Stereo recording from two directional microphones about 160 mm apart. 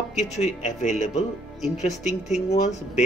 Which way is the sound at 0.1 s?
45° left (ahead or behind).